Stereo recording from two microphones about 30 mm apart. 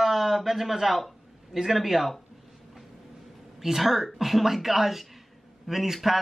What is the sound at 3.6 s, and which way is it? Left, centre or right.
A man's voice, centre.